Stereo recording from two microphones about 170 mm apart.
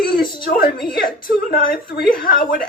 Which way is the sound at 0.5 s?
60° left (ahead or behind).